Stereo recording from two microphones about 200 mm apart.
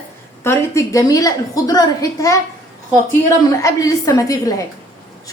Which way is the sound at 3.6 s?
15° left (ahead or behind).